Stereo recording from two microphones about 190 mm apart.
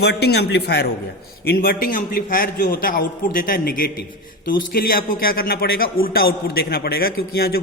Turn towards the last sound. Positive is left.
turn(degrees=55)  # may be behind; listen again after turning